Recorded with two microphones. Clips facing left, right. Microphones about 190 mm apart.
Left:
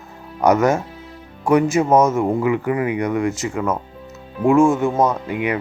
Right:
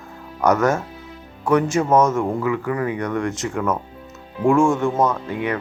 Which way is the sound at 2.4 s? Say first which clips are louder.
Left 3 dB; 20° left (ahead or behind).